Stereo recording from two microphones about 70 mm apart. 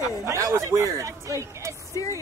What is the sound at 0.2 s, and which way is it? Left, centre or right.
Speech, right.